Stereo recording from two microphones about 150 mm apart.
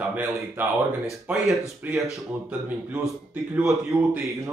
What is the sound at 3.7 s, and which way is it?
Speech, 20° right (ahead or behind).